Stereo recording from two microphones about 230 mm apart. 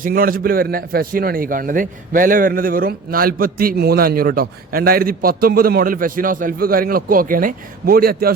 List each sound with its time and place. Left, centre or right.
0.0 s a man's voice: right